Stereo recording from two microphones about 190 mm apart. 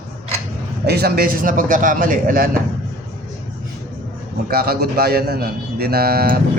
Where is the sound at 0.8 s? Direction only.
55° right (ahead or behind).